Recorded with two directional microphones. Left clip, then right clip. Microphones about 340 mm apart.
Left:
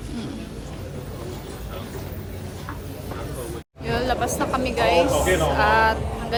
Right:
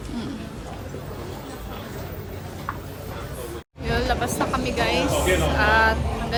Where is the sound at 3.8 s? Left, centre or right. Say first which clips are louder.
Left 1 dB; centre.